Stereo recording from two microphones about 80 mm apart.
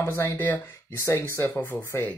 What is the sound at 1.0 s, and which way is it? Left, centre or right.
Speech, left.